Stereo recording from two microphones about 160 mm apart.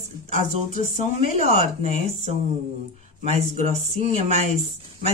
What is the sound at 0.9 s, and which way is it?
Speech, 45° right (ahead or behind).